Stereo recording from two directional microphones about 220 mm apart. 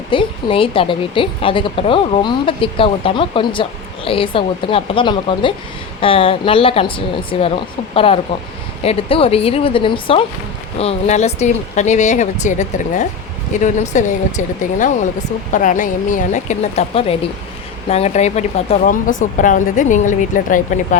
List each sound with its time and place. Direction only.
0.1 s a woman's voice: 25° left (ahead or behind)